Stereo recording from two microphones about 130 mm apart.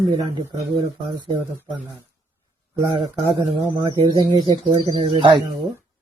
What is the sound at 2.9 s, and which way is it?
Speech, 40° right (ahead or behind).